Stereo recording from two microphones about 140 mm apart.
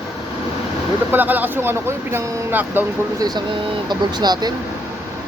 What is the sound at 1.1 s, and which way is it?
Speech, 15° right (ahead or behind).